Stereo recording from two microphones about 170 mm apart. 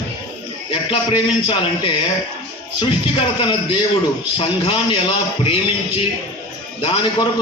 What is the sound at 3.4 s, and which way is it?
A man's voice, 30° left (ahead or behind).